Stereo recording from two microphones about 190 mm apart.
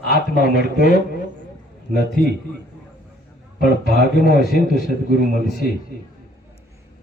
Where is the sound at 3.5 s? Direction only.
50° left (ahead or behind).